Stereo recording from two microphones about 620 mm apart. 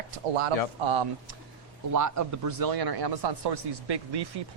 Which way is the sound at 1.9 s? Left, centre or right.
Right.